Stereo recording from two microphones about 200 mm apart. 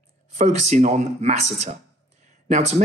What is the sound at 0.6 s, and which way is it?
Speech, 35° right (ahead or behind).